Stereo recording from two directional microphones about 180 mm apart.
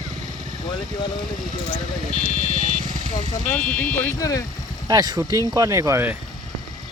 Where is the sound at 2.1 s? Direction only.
40° left (ahead or behind).